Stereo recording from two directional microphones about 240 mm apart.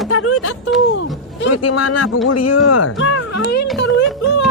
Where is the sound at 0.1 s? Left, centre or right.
Left.